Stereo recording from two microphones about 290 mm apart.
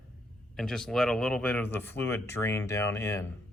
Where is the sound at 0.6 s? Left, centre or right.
Centre.